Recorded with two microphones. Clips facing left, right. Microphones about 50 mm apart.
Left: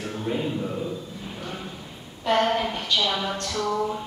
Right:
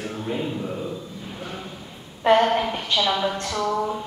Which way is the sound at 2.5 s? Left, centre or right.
Centre.